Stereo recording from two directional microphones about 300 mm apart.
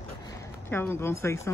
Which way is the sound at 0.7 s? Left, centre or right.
Centre.